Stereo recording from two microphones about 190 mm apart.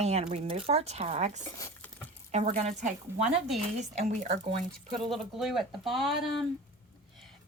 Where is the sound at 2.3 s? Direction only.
35° right (ahead or behind).